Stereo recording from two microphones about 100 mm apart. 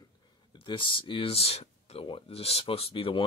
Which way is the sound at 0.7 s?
60° left (ahead or behind).